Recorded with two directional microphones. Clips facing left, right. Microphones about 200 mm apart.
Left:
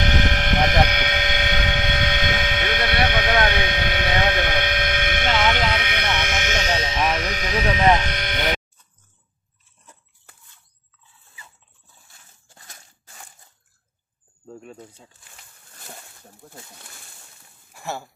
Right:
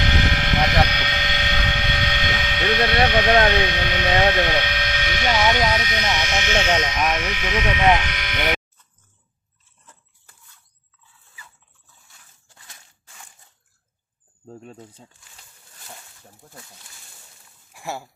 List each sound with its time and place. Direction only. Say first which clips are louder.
0.0 s a sound: left 1 dB; 50° left (ahead or behind)
3.6 s speech: right 1 dB; 50° left (ahead or behind); by 7.8 s 35° left (ahead or behind)
8.0 s sheep: left 3 dB; 35° left (ahead or behind)
17.7 s speech: even; 10° right (ahead or behind)